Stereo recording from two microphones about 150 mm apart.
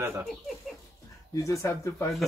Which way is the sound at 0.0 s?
20° right (ahead or behind).